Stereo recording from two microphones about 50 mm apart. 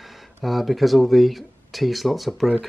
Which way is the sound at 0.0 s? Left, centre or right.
Centre.